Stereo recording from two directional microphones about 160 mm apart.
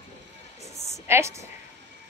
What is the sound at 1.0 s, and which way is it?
Speech, 15° right (ahead or behind).